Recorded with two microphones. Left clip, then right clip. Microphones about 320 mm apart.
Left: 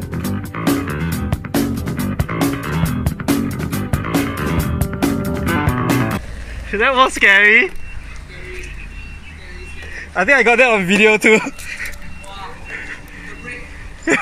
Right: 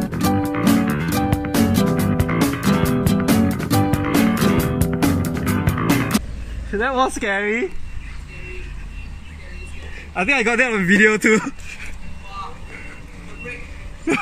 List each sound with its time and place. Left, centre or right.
0.1 s music: centre
6.8 s speech: centre
10.1 s speech: centre